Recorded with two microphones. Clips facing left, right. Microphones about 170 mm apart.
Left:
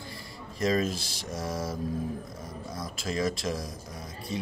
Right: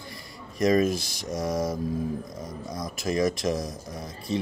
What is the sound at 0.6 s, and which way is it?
Speech, 15° right (ahead or behind).